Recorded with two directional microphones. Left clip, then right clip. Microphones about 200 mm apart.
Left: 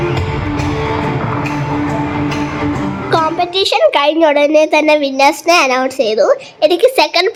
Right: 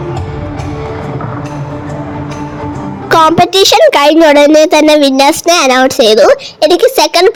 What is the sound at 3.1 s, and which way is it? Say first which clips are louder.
Music: right 8 dB; 45° right (ahead or behind).